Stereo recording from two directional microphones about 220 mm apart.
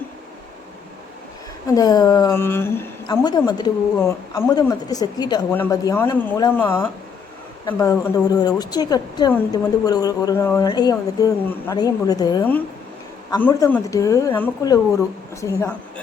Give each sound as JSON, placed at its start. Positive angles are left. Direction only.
{"t": 1.6, "sound": "a woman's voice", "side_deg": 15}